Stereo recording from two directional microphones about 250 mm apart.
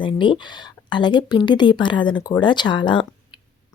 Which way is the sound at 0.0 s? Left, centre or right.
Centre.